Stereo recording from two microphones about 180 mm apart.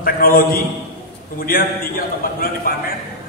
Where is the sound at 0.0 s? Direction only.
55° left (ahead or behind).